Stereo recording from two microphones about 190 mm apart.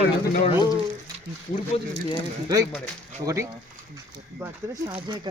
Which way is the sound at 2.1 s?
20° right (ahead or behind).